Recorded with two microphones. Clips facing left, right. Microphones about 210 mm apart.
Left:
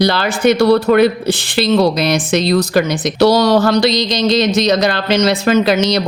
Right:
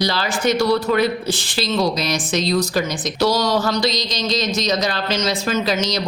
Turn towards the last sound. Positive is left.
turn(degrees=65)  # may be behind; listen again after turning